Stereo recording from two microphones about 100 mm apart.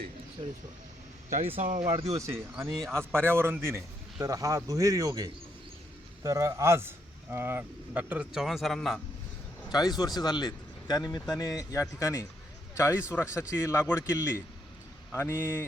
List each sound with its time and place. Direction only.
0.4 s speech: 60° right (ahead or behind)
1.5 s speech: 70° right (ahead or behind)
2.1 s a man's voice: 30° right (ahead or behind); by 9.0 s centre (ahead or behind)
9.6 s a man's voice: 40° left (ahead or behind); by 15.6 s 25° left (ahead or behind)